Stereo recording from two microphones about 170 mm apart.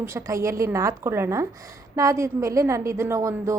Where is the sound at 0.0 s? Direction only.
15° right (ahead or behind).